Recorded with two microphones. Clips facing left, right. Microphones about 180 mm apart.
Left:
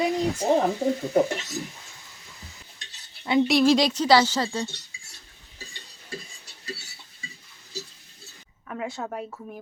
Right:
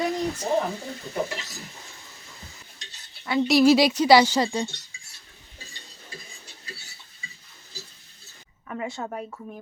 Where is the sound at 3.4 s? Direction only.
5° right (ahead or behind).